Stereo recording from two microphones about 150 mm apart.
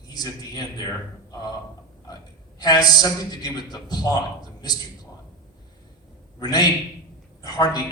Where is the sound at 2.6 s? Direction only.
25° left (ahead or behind).